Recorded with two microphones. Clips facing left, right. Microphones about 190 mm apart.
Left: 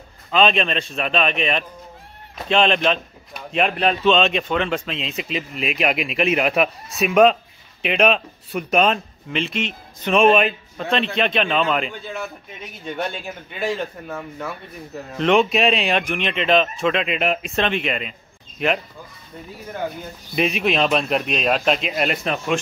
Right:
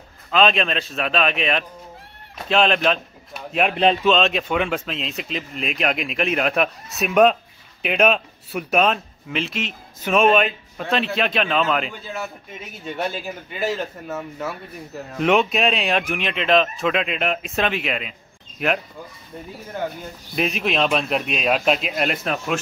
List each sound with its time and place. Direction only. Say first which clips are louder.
0.3 s a man's voice: even; centre (ahead or behind)
3.7 s speech: right 3 dB; 30° right (ahead or behind)
4.0 s a man's voice: left 1 dB; centre (ahead or behind)
20.3 s a man's voice: left 2 dB; centre (ahead or behind)